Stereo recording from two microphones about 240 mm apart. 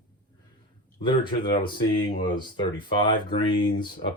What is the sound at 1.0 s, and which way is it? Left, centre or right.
Speech, centre.